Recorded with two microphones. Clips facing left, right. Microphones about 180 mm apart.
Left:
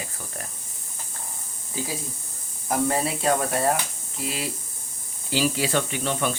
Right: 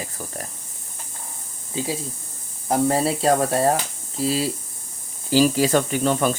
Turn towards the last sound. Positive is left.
turn(degrees=-40)  # may be behind; listen again after turning